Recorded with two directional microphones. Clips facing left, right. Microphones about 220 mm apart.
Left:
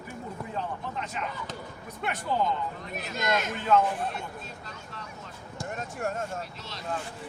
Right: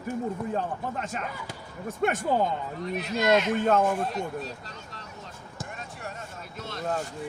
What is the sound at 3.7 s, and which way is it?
Speech, 45° right (ahead or behind).